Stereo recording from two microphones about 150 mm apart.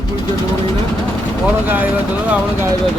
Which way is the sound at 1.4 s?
10° right (ahead or behind).